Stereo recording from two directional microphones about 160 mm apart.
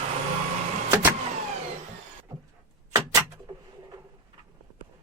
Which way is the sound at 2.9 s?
25° right (ahead or behind).